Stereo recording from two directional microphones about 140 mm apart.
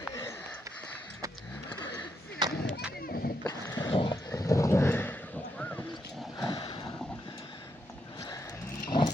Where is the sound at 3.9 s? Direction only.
35° left (ahead or behind).